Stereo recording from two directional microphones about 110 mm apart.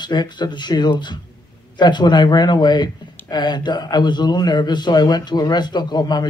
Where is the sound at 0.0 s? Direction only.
40° left (ahead or behind).